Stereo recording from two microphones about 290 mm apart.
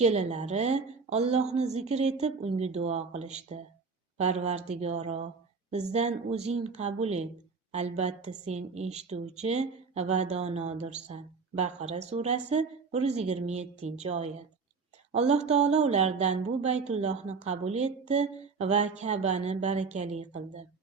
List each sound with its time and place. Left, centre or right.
0.0 s a woman's voice: right